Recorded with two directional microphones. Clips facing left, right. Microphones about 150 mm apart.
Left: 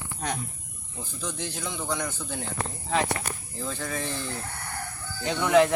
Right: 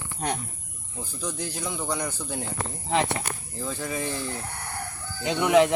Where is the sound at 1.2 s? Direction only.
10° right (ahead or behind).